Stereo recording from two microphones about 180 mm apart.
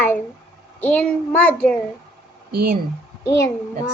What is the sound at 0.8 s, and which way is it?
Child singing, 10° left (ahead or behind).